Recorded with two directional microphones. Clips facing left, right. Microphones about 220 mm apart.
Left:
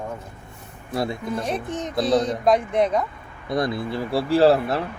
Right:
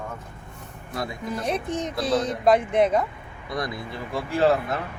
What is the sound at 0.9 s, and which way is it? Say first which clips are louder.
Speech: left 6 dB; 30° left (ahead or behind).